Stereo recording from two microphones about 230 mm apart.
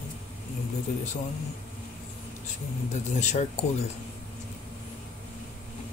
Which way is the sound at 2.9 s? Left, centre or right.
Left.